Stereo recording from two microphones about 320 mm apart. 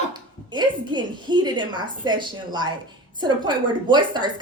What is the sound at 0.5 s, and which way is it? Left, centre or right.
A woman's voice, centre.